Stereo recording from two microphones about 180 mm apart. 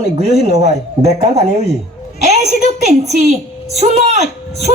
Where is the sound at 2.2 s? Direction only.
40° right (ahead or behind).